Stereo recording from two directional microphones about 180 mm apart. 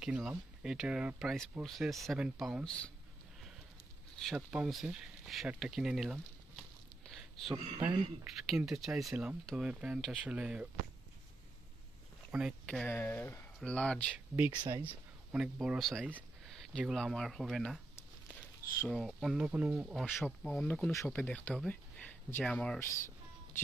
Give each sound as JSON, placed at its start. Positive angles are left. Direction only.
{"t": 0.0, "sound": "speech", "side_deg": -5}
{"t": 4.2, "sound": "speech", "side_deg": 0}
{"t": 7.1, "sound": "a sound", "side_deg": 0}
{"t": 7.5, "sound": "speech", "side_deg": -25}
{"t": 8.2, "sound": "speech", "side_deg": 0}
{"t": 12.3, "sound": "speech", "side_deg": -5}
{"t": 12.6, "sound": "speech", "side_deg": 10}
{"t": 14.3, "sound": "speech", "side_deg": -10}
{"t": 20.0, "sound": "speech", "side_deg": 0}